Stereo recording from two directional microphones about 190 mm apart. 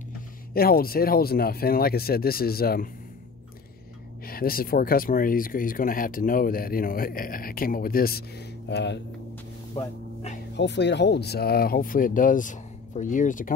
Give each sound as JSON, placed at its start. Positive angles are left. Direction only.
{"t": 0.6, "sound": "speech", "side_deg": 50}
{"t": 4.3, "sound": "speech", "side_deg": 50}
{"t": 8.6, "sound": "speech", "side_deg": 65}
{"t": 10.5, "sound": "speech", "side_deg": 65}